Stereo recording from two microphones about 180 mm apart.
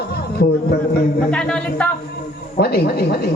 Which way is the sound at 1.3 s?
5° left (ahead or behind).